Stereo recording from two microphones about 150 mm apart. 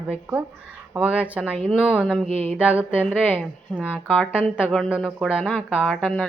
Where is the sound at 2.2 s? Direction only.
40° right (ahead or behind).